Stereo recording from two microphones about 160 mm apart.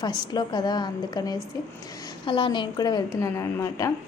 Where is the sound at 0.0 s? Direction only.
25° left (ahead or behind).